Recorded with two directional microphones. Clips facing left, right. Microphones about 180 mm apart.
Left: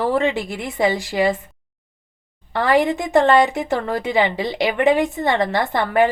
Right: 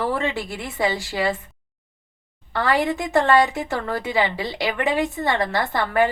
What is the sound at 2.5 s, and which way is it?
A woman's voice, 20° left (ahead or behind).